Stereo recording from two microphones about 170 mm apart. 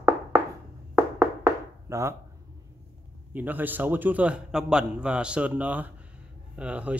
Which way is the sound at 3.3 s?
10° right (ahead or behind).